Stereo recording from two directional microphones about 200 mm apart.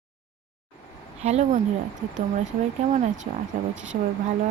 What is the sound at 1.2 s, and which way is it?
Speech, 35° right (ahead or behind).